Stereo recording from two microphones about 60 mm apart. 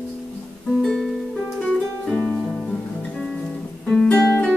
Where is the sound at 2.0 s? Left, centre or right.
Centre.